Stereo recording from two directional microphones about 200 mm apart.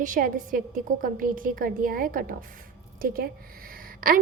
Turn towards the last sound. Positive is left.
turn(degrees=-45)  # may be behind; listen again after turning